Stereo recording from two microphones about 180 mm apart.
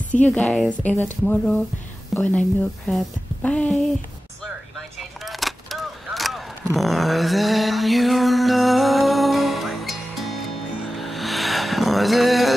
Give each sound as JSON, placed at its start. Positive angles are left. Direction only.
{"t": 0.1, "sound": "a woman's voice", "side_deg": 5}
{"t": 3.4, "sound": "a woman's voice", "side_deg": 10}
{"t": 4.7, "sound": "a sound", "side_deg": 0}